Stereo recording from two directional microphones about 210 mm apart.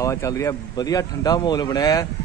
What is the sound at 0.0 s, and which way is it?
A man's voice, 15° left (ahead or behind).